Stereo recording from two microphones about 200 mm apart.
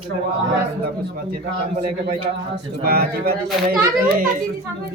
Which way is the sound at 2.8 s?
50° right (ahead or behind).